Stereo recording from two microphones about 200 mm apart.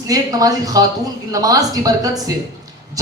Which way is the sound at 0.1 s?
20° right (ahead or behind).